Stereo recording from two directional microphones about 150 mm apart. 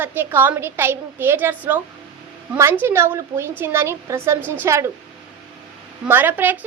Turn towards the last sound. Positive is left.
turn(degrees=-10)  # may be behind; listen again after turning